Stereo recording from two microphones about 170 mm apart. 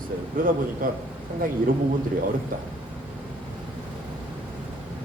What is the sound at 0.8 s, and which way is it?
Speech, 55° right (ahead or behind).